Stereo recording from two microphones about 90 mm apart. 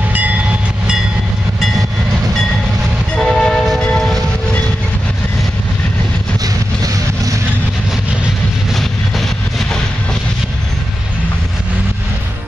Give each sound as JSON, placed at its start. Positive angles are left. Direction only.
{"t": 3.2, "sound": "train", "side_deg": 5}
{"t": 6.4, "sound": "vehicle", "side_deg": -45}